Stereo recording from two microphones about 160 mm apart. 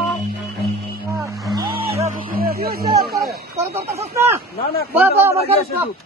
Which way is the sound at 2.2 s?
65° right (ahead or behind).